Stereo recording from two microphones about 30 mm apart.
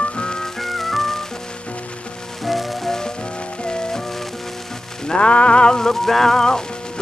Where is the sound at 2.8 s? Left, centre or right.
Centre.